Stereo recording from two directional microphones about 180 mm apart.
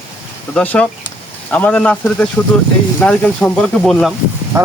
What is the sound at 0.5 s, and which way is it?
Speech, 10° left (ahead or behind).